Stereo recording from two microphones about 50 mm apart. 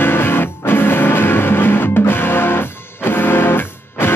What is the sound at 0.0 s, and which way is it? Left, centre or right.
Music, left.